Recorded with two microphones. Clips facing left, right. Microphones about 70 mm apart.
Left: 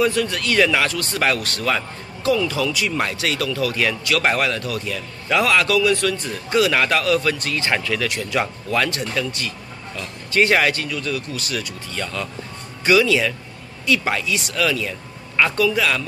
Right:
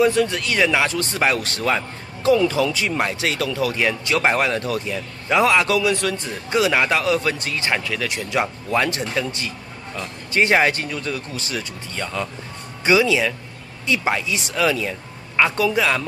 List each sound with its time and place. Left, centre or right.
0.0 s speech: centre
10.9 s speech: right